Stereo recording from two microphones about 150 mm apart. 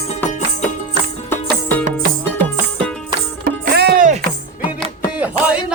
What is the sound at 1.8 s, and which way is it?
Music, 65° right (ahead or behind).